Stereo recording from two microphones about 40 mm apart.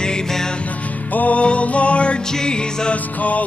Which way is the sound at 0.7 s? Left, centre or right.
Left.